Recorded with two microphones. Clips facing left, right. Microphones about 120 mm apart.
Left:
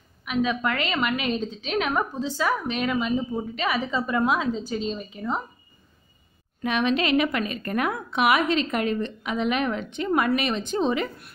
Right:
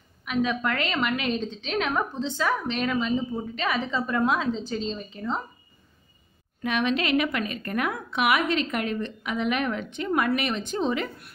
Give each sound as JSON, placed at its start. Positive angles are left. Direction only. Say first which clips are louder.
{"t": 0.2, "sound": "a woman's voice", "louder": "left 1 dB", "side_deg": 5}
{"t": 6.6, "sound": "a woman's voice", "louder": "left 2 dB", "side_deg": 25}